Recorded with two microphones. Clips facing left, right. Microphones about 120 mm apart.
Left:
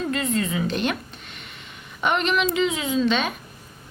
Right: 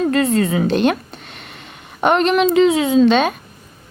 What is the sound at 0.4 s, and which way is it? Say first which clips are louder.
Speech: right 8 dB; 55° right (ahead or behind).